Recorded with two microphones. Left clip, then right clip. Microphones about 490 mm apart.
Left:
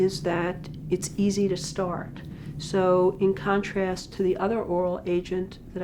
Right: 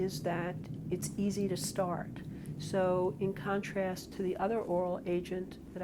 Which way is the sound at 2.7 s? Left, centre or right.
Right.